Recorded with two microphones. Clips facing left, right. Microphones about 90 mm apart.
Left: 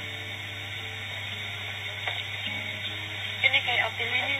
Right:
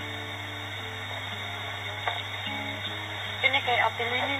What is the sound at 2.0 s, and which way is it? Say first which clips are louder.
Music: right 4 dB; 30° right (ahead or behind).